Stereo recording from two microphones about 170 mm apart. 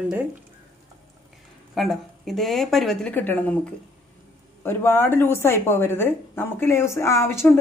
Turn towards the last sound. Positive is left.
turn(degrees=15)  # may be behind; listen again after turning